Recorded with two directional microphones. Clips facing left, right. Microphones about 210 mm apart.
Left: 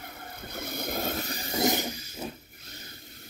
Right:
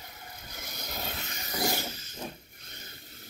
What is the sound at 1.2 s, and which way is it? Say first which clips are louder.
Rub: left 4 dB; 30° left (ahead or behind).